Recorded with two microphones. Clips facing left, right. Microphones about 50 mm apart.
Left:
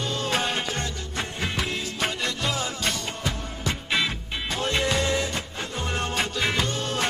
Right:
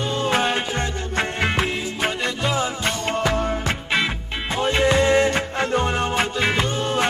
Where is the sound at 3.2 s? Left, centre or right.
Right.